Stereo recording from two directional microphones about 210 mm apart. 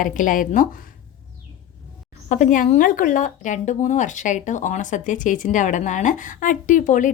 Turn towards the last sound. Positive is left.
turn(degrees=35)  # may be behind; listen again after turning